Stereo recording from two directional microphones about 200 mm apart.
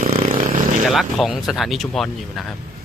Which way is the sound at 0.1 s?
30° right (ahead or behind).